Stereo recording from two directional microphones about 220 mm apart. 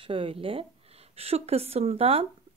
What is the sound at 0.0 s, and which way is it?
A woman's voice, 25° right (ahead or behind).